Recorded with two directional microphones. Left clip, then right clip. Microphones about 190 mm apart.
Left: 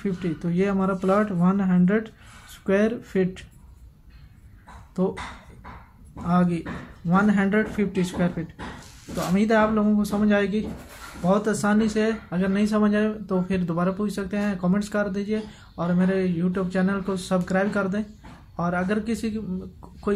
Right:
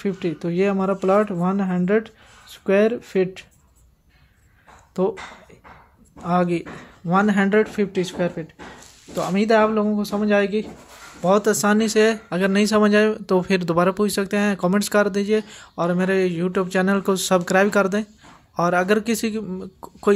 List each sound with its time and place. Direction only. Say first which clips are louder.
0.0 s speech: right 4 dB; 35° right (ahead or behind)
5.0 s speech: right 5 dB; 35° right (ahead or behind)
6.2 s speech: right 4 dB; 40° right (ahead or behind)
11.2 s speech: right 5 dB; 45° right (ahead or behind)